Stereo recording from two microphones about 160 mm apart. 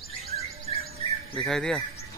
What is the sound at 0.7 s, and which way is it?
Bird, 45° right (ahead or behind).